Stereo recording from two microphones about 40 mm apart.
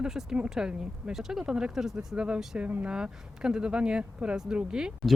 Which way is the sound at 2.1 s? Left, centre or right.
Right.